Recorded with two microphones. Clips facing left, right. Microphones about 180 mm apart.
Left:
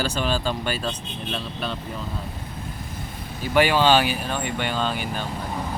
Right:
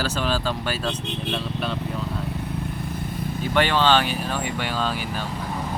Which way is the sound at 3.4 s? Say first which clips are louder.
Left 2 dB; 10° left (ahead or behind).